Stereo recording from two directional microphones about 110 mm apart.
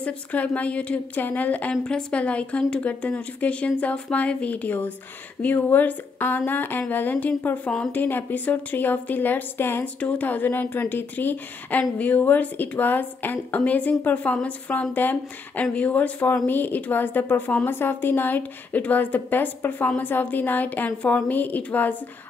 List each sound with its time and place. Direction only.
0.0 s a woman's voice: 15° left (ahead or behind)